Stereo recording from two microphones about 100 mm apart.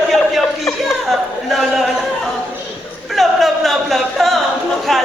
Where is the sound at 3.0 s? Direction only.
Centre (ahead or behind).